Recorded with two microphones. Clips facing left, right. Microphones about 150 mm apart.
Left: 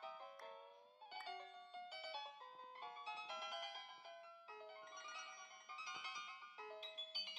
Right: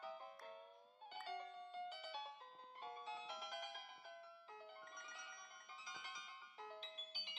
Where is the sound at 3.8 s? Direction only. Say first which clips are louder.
Even; 45° left (ahead or behind).